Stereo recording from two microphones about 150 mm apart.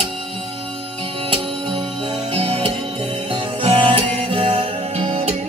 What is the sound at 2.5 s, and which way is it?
Music, 40° right (ahead or behind).